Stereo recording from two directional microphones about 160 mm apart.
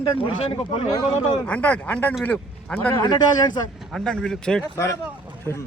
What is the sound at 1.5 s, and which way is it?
A man's voice, 10° left (ahead or behind).